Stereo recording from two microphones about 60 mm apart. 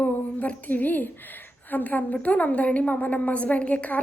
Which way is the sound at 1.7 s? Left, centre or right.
Left.